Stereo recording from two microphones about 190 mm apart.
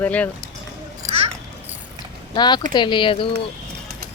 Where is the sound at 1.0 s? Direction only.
15° right (ahead or behind).